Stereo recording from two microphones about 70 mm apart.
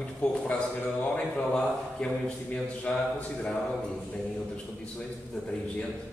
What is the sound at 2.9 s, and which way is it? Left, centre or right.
Speech, centre.